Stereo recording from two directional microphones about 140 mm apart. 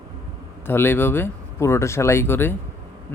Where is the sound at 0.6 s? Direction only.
15° left (ahead or behind).